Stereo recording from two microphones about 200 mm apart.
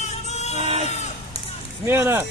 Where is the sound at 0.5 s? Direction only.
30° right (ahead or behind).